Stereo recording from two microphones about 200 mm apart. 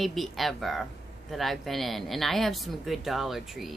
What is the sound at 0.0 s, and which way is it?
Speech, centre (ahead or behind).